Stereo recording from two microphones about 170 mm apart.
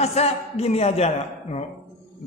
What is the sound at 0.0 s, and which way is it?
A woman's voice, 40° left (ahead or behind).